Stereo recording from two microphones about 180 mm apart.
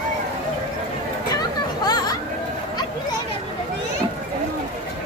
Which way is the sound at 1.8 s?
20° left (ahead or behind).